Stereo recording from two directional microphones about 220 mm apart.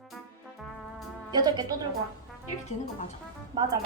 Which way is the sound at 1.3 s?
20° right (ahead or behind).